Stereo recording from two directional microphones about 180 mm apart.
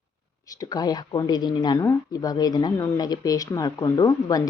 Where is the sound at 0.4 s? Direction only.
20° left (ahead or behind).